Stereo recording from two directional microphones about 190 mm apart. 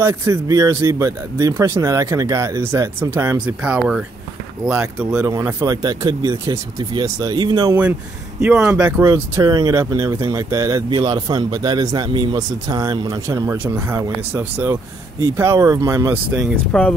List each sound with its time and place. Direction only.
0.0 s speech: 15° right (ahead or behind)
8.4 s speech: 10° right (ahead or behind)